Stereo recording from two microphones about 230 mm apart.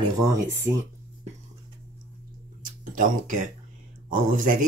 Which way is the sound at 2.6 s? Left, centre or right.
Right.